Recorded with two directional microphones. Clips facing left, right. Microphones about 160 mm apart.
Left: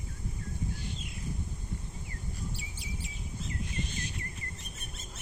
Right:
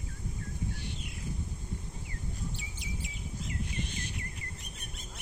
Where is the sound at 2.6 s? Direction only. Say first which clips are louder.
Right 1 dB; 20° right (ahead or behind).